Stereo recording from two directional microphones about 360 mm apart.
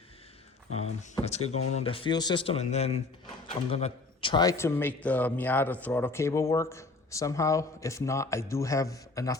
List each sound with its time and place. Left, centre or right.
0.7 s a man's voice: centre